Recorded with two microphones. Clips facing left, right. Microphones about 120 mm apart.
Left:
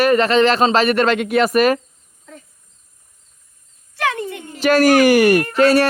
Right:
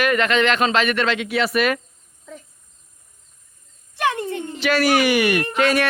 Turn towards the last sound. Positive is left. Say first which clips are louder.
# left 5 dB
turn(degrees=35)  # may be behind; listen again after turning